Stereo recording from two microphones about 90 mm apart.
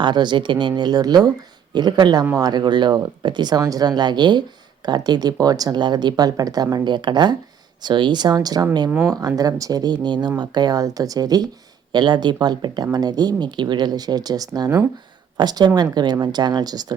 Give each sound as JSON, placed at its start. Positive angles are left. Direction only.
{"t": 0.0, "sound": "speech", "side_deg": -55}
{"t": 11.9, "sound": "speech", "side_deg": -60}